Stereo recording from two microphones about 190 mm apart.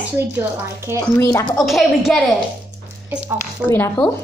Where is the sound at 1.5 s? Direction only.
Centre (ahead or behind).